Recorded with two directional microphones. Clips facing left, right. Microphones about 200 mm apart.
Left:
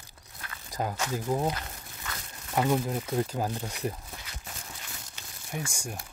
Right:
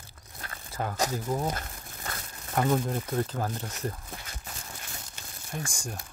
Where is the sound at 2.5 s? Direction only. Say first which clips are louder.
Even; 10° left (ahead or behind).